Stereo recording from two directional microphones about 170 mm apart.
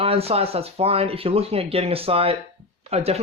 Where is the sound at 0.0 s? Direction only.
35° right (ahead or behind).